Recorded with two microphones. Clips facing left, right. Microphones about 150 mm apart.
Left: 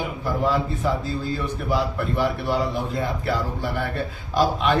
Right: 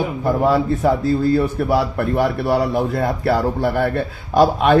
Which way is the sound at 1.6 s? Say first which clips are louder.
Right 6 dB; 70° right (ahead or behind).